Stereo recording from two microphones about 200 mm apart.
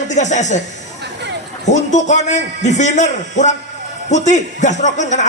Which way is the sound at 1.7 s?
35° left (ahead or behind).